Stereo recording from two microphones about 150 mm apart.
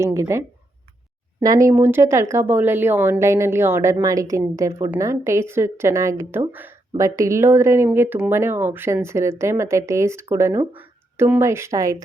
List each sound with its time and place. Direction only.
0.0 s speech: 20° right (ahead or behind)
1.6 s a woman's voice: 15° right (ahead or behind)